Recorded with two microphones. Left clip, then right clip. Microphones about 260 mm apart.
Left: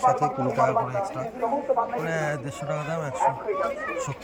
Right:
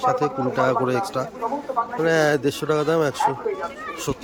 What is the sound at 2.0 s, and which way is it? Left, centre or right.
Speech, right.